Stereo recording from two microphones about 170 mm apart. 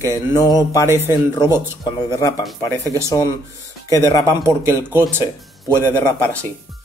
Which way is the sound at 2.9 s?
15° right (ahead or behind).